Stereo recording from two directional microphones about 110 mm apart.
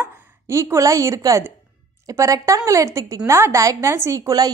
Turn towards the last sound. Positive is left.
turn(degrees=-35)  # may be behind; listen again after turning